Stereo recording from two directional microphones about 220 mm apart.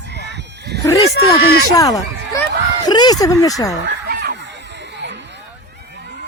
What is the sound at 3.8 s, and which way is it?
Chicken, 50° right (ahead or behind).